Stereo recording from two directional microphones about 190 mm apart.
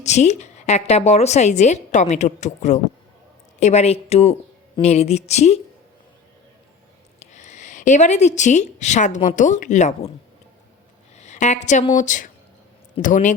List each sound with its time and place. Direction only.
0.0 s a woman's voice: 35° left (ahead or behind)
7.2 s a woman's voice: 40° left (ahead or behind)
11.2 s a woman's voice: 40° left (ahead or behind)